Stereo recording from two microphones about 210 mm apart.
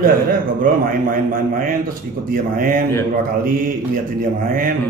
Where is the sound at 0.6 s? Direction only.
40° right (ahead or behind).